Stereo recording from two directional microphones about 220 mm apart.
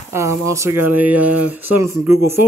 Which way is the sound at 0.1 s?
15° right (ahead or behind).